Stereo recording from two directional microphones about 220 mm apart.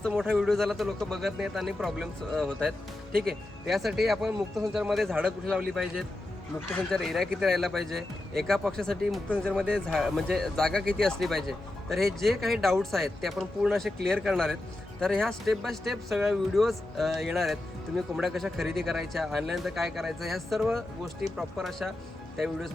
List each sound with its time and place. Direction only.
0.0 s speech: centre (ahead or behind)
3.1 s speech: 45° right (ahead or behind)
3.7 s speech: centre (ahead or behind)